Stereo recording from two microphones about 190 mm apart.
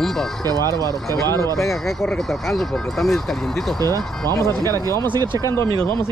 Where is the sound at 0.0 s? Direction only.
Centre (ahead or behind).